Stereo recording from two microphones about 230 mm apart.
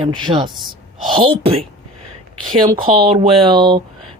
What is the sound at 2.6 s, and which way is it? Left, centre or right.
Speech, right.